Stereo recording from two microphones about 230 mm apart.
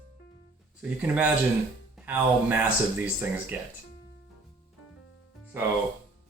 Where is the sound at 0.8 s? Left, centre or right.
Centre.